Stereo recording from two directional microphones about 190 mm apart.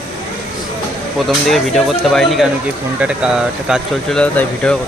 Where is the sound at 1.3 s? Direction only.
Centre (ahead or behind).